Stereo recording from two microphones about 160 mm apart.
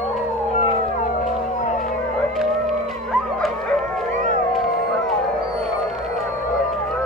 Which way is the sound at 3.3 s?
5° left (ahead or behind).